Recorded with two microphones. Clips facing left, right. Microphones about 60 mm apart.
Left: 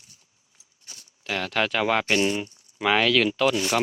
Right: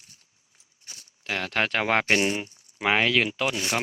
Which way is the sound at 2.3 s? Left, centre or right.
Right.